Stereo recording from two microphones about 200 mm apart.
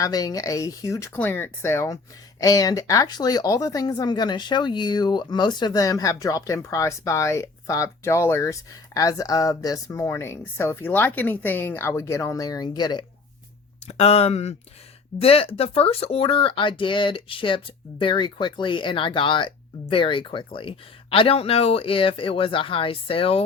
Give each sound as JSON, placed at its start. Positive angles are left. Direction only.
{"t": 0.0, "sound": "speech", "side_deg": 20}
{"t": 13.8, "sound": "speech", "side_deg": 30}